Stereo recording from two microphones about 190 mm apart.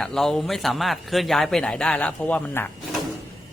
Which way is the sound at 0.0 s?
Centre (ahead or behind).